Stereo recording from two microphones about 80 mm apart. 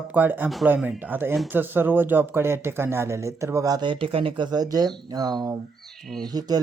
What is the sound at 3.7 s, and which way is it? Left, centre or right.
Speech, right.